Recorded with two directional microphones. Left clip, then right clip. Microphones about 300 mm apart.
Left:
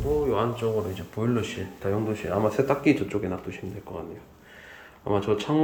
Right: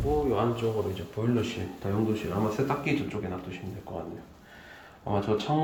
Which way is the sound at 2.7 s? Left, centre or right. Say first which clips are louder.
Left 6 dB; left.